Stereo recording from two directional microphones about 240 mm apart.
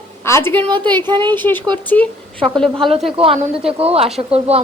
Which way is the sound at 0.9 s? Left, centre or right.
Centre.